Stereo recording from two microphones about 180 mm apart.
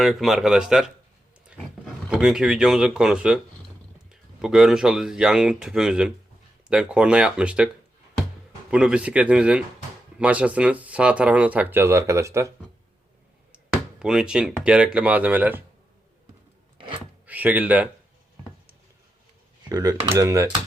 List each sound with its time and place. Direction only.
0.0 s speech: centre (ahead or behind)
8.7 s speech: 5° right (ahead or behind)
14.0 s speech: 5° right (ahead or behind)
17.2 s speech: 10° right (ahead or behind)
19.6 s speech: 20° right (ahead or behind)